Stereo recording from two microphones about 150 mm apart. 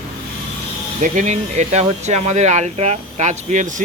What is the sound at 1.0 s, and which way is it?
Speech, 55° right (ahead or behind).